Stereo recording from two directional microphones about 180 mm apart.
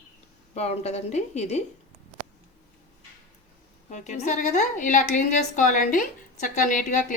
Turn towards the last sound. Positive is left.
turn(degrees=45)  # may be behind; listen again after turning